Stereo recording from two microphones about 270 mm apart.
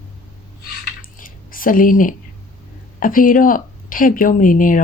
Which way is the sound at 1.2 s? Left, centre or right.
Left.